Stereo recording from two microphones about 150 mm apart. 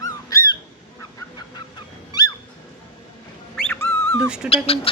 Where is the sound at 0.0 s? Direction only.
20° left (ahead or behind).